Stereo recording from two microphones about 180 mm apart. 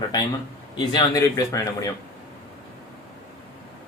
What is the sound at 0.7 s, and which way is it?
Speech, 25° left (ahead or behind).